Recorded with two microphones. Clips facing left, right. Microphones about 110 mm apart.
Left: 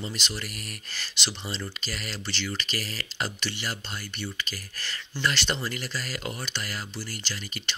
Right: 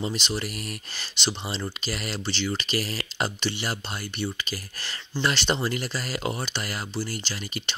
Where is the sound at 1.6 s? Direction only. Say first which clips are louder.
Right 4 dB; 40° right (ahead or behind).